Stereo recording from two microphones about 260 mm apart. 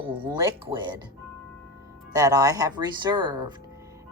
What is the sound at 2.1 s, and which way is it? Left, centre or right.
Speech, centre.